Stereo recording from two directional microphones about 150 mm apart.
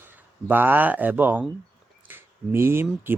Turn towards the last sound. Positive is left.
turn(degrees=-15)  # may be behind; listen again after turning